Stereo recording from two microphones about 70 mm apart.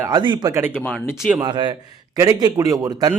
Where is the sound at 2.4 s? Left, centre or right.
Right.